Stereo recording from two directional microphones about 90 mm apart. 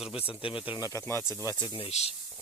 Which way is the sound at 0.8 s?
35° left (ahead or behind).